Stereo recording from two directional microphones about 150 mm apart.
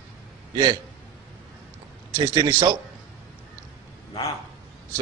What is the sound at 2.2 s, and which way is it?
Speech, 30° right (ahead or behind).